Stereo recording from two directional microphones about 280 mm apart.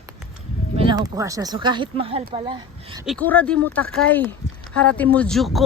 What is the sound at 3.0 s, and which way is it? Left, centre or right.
Speech, centre.